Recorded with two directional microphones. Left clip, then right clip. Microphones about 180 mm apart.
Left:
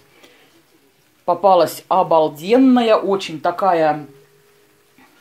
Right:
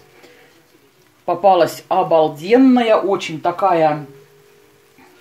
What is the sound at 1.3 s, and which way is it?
Speech, 30° left (ahead or behind).